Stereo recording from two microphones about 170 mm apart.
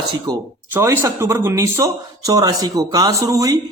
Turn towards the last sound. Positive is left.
turn(degrees=-20)  # may be behind; listen again after turning